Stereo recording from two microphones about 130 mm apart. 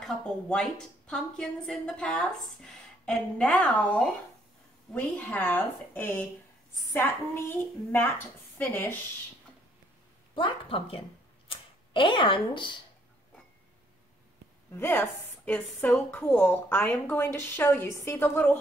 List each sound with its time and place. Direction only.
0.0 s a woman's voice: 5° left (ahead or behind)
10.3 s speech: 45° left (ahead or behind)
11.4 s camera: 40° left (ahead or behind)
14.7 s a woman's voice: 20° left (ahead or behind)